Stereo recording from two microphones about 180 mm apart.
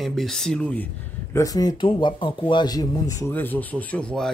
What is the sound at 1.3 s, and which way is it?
Speech, 20° left (ahead or behind).